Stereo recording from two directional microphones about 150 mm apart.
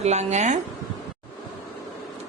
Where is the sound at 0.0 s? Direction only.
50° right (ahead or behind).